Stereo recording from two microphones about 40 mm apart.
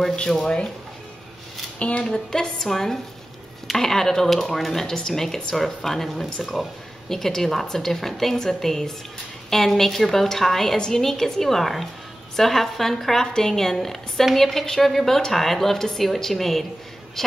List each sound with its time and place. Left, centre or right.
0.1 s speech: centre
1.8 s speech: left
2.0 s a woman's voice: centre